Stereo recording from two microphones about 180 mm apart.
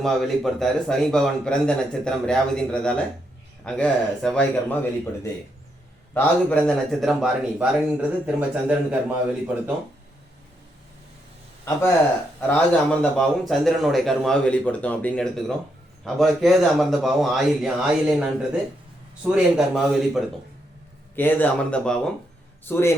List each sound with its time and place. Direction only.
0.0 s a man's voice: centre (ahead or behind)
12.4 s a man's voice: 5° left (ahead or behind)
21.2 s a man's voice: 10° left (ahead or behind)